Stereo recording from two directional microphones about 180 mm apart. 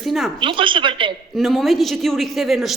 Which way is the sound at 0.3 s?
30° right (ahead or behind).